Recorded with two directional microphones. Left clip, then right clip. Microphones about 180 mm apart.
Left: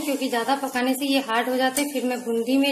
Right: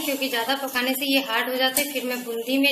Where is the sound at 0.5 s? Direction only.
55° left (ahead or behind).